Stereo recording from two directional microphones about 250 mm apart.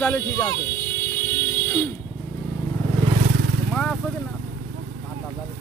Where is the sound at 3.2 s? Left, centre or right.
Right.